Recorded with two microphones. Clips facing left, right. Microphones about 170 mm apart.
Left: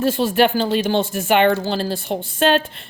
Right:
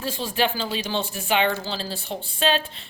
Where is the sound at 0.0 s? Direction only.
65° left (ahead or behind).